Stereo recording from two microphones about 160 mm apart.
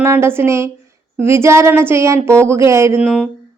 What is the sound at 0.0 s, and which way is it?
A woman's voice, 15° right (ahead or behind).